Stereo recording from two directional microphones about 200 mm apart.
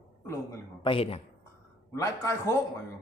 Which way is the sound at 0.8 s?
25° left (ahead or behind).